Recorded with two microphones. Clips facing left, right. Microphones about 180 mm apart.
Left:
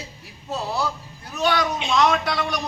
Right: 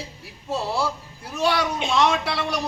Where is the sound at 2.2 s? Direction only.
30° right (ahead or behind).